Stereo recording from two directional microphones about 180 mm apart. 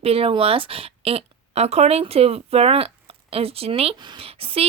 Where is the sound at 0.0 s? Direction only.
35° right (ahead or behind).